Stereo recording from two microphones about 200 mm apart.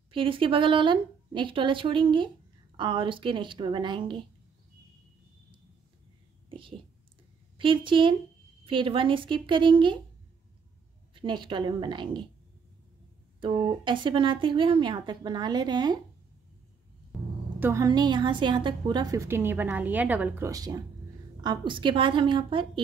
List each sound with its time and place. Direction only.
0.1 s a woman's voice: 25° right (ahead or behind)
7.5 s a woman's voice: 25° right (ahead or behind)
11.1 s a woman's voice: 25° right (ahead or behind)
13.4 s a woman's voice: 25° right (ahead or behind)
17.1 s a sound: centre (ahead or behind)
17.6 s a woman's voice: 15° right (ahead or behind)